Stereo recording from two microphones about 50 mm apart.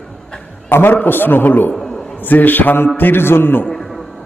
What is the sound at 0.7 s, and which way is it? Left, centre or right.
A man's voice, left.